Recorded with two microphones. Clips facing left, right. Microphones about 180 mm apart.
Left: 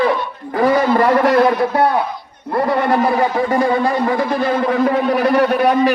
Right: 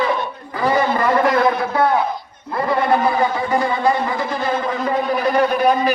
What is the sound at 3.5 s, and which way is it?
Speech, 50° left (ahead or behind).